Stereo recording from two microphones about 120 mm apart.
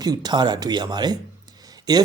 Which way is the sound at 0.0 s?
35° right (ahead or behind).